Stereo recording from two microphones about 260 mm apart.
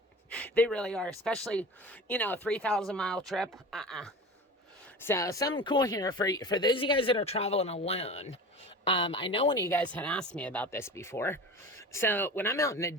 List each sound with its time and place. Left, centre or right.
0.3 s speech: centre
5.0 s speech: centre